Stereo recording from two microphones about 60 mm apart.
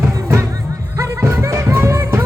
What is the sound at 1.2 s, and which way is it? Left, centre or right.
Music, right.